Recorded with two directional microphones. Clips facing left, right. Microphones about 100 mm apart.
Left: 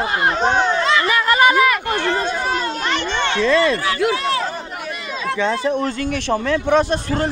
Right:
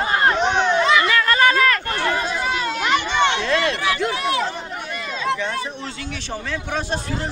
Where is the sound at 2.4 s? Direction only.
40° left (ahead or behind).